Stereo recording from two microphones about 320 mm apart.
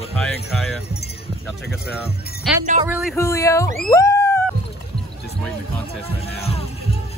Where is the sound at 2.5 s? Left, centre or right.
Centre.